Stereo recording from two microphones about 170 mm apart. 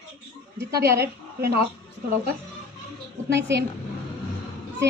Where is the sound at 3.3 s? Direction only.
90° right.